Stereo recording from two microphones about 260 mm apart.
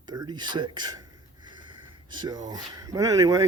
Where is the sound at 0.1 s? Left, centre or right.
Centre.